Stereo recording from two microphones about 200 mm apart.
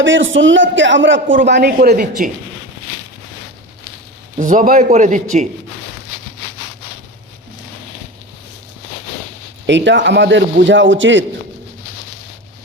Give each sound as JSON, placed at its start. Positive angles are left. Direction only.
{"t": 0.0, "sound": "a man's voice", "side_deg": -70}
{"t": 1.5, "sound": "speech", "side_deg": -55}
{"t": 4.4, "sound": "a man's voice", "side_deg": -40}
{"t": 9.6, "sound": "a man's voice", "side_deg": -65}